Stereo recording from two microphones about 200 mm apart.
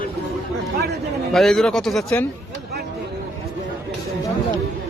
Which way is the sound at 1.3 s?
Centre (ahead or behind).